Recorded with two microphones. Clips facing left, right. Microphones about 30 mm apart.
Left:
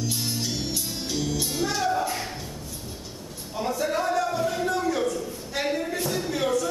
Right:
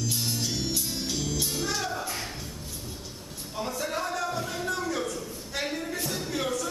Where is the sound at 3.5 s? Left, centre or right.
Centre.